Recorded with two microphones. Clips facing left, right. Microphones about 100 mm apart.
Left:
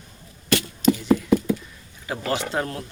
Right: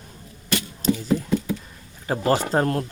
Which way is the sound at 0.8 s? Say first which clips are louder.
Left 3 dB; 35° right (ahead or behind).